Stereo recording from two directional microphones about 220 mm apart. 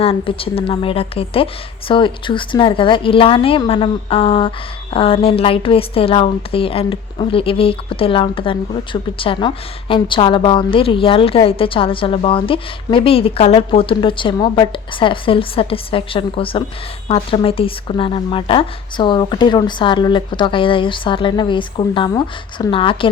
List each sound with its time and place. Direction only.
0.0 s a woman's voice: 25° left (ahead or behind)